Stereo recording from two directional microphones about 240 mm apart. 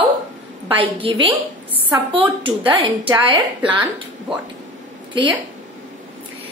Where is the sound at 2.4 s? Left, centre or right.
Right.